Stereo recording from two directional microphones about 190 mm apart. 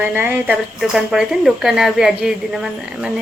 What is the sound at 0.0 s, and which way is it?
Speech, 10° right (ahead or behind).